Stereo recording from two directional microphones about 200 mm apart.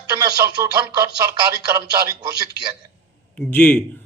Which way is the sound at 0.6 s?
15° right (ahead or behind).